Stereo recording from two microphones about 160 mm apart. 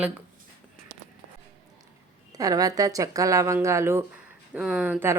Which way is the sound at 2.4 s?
20° right (ahead or behind).